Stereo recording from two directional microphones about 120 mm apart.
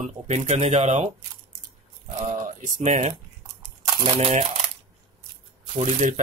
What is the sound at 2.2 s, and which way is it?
Speech, 90° right.